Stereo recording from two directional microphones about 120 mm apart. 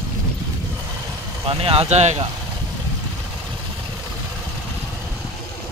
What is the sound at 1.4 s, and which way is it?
Speech, 50° right (ahead or behind).